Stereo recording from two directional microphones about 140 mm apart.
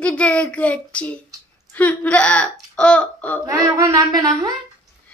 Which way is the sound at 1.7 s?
10° left (ahead or behind).